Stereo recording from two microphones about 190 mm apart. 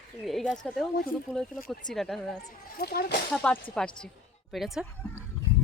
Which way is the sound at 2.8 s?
55° left (ahead or behind).